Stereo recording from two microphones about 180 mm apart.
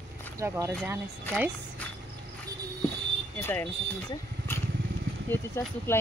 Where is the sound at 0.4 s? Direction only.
15° right (ahead or behind).